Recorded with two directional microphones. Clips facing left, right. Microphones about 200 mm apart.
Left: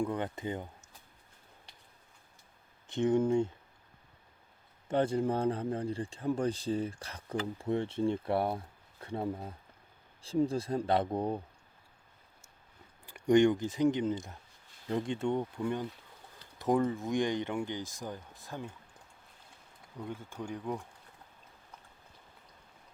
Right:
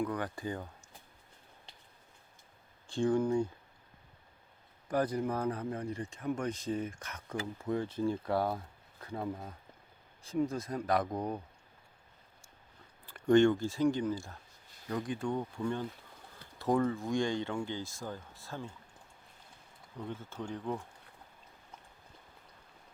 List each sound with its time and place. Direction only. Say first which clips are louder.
0.0 s speech: left 1 dB; 25° left (ahead or behind)
2.8 s speech: left 2 dB; 20° left (ahead or behind)
4.9 s speech: left 3 dB; 25° left (ahead or behind)
13.1 s speech: even; 15° left (ahead or behind)
20.0 s speech: even; 10° left (ahead or behind)